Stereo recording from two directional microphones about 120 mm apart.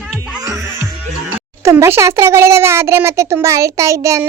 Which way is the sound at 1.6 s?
25° right (ahead or behind).